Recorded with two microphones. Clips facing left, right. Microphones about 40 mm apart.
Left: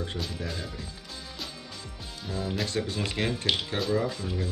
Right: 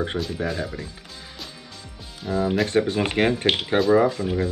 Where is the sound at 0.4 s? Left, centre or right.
Right.